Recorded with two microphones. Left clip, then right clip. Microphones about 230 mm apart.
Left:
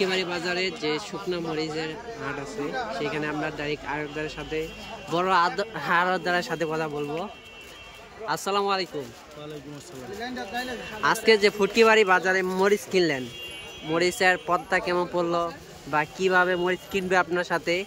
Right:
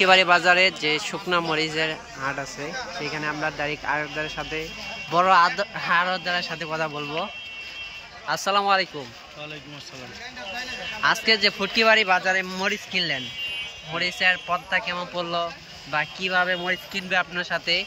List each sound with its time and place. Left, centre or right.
0.0 s a man's voice: centre
8.3 s speech: centre
11.0 s speech: centre